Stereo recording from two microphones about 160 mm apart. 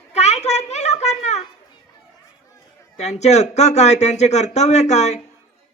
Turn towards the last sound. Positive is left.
turn(degrees=45)  # may be behind; listen again after turning